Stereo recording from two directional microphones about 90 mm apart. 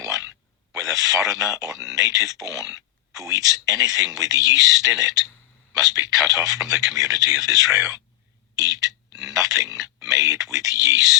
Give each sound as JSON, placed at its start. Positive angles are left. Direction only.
{"t": 0.7, "sound": "speech", "side_deg": -40}